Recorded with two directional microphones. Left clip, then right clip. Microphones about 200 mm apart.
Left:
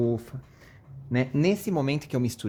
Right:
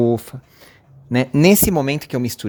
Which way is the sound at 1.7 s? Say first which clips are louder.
Right 8 dB; 35° right (ahead or behind).